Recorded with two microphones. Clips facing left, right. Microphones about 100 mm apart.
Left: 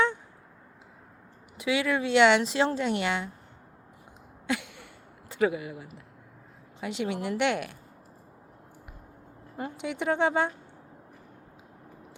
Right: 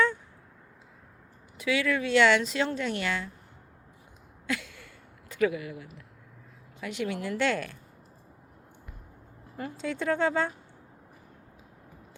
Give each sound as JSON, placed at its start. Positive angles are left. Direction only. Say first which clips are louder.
{"t": 1.5, "sound": "speech", "louder": "left 1 dB", "side_deg": 20}
{"t": 4.4, "sound": "a sound", "louder": "left 2 dB", "side_deg": 20}
{"t": 5.3, "sound": "speech", "louder": "left 1 dB", "side_deg": 25}
{"t": 9.6, "sound": "speech", "louder": "even", "side_deg": 20}